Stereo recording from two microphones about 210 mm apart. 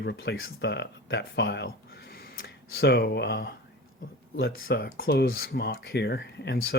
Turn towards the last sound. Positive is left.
turn(degrees=50)  # may be behind; listen again after turning